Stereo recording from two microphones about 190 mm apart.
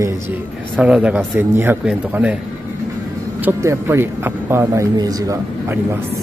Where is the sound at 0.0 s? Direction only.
10° right (ahead or behind).